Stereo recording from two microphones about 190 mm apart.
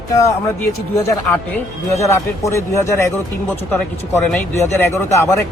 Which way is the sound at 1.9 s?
15° left (ahead or behind).